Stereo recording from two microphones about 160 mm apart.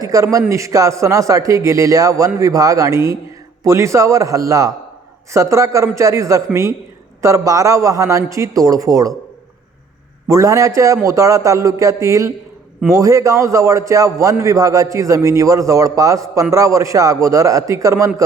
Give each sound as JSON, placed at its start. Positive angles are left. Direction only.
{"t": 0.0, "sound": "a man's voice", "side_deg": -20}
{"t": 10.2, "sound": "a man's voice", "side_deg": -20}